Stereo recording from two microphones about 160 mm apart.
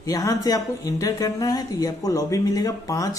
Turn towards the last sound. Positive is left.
turn(degrees=20)  # may be behind; listen again after turning